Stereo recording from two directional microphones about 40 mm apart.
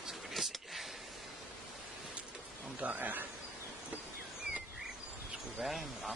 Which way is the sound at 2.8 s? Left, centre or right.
Right.